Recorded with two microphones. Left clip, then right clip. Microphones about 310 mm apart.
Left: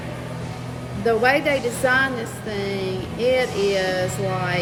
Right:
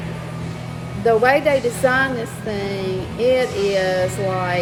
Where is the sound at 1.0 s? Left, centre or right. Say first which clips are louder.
Right 3 dB; centre.